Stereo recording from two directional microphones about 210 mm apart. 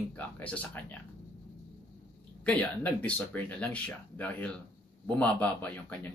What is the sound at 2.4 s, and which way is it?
A man's voice, 5° left (ahead or behind).